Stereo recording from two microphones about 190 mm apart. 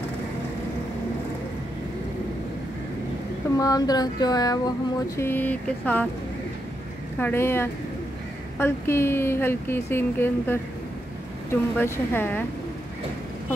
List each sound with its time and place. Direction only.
3.5 s a sound: 20° left (ahead or behind)
7.2 s speech: 10° left (ahead or behind)
11.8 s speech: 10° left (ahead or behind)